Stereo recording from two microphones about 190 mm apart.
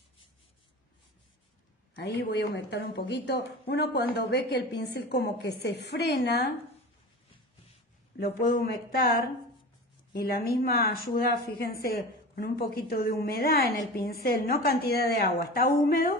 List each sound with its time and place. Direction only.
2.0 s a woman's voice: 65° left (ahead or behind)
8.2 s a woman's voice: 55° left (ahead or behind)
10.1 s speech: 50° left (ahead or behind)